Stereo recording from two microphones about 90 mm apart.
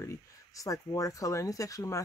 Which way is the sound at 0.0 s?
35° left (ahead or behind).